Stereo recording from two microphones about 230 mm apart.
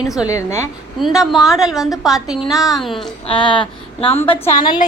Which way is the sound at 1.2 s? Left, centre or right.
Centre.